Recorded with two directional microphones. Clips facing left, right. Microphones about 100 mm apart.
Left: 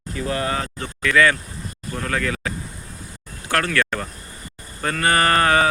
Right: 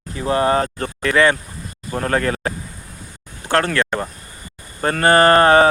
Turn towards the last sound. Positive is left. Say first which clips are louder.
# right 6 dB
turn(degrees=-35)  # may be behind; listen again after turning